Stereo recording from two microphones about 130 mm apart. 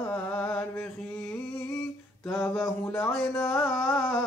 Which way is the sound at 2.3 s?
10° left (ahead or behind).